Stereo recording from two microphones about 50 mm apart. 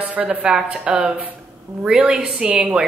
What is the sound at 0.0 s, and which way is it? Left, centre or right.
A woman's voice, right.